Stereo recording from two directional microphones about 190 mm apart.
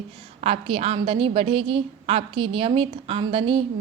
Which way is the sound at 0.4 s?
30° right (ahead or behind).